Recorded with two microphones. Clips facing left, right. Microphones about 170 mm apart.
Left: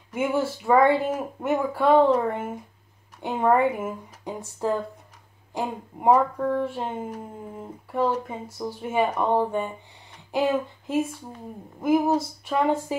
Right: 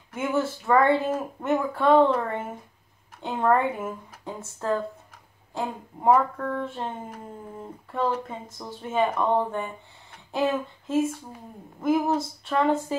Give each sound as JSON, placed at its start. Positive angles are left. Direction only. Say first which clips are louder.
{"t": 0.1, "sound": "speech", "louder": "left 2 dB", "side_deg": 10}